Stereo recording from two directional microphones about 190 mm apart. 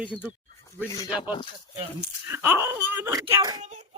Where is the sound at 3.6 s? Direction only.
40° right (ahead or behind).